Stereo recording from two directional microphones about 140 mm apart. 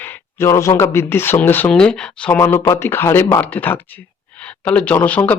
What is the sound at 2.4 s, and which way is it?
Speech, 20° left (ahead or behind).